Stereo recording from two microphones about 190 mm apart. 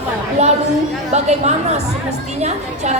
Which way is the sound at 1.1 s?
35° right (ahead or behind).